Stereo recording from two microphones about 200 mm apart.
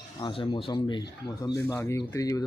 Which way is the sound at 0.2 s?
25° left (ahead or behind).